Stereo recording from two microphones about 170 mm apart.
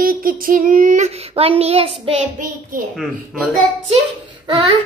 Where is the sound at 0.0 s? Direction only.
55° right (ahead or behind); by 2.2 s 35° right (ahead or behind).